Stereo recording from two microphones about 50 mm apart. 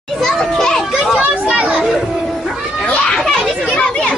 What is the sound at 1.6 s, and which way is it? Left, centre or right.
Children playing, right.